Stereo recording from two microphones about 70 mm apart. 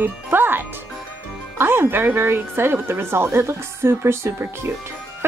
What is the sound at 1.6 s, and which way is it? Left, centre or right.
A woman's voice, right.